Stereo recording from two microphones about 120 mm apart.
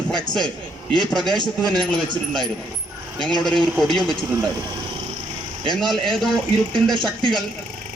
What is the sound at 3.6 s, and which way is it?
Speech, 5° left (ahead or behind).